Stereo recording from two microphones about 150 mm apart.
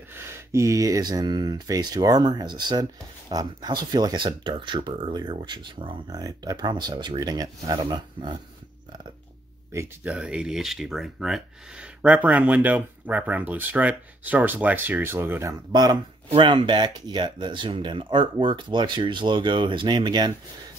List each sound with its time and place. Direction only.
0.1 s speech: 15° right (ahead or behind)
9.7 s speech: 15° right (ahead or behind)
10.1 s speech: 5° right (ahead or behind)
15.7 s speech: 25° right (ahead or behind)